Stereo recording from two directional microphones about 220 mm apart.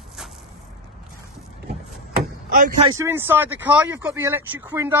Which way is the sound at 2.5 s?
40° right (ahead or behind).